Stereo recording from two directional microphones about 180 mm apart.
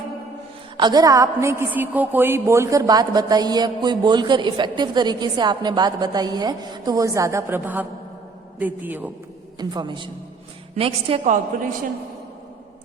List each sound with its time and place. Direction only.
0.8 s a woman's voice: 20° right (ahead or behind)
9.6 s a woman's voice: 25° right (ahead or behind)